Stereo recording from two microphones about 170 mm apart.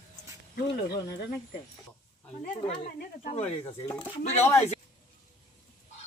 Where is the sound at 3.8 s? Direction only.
20° left (ahead or behind).